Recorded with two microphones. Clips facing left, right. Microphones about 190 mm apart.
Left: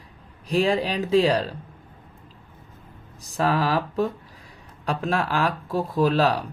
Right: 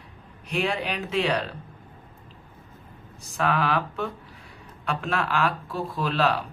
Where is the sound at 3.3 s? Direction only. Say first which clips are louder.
Left 2 dB; 35° left (ahead or behind).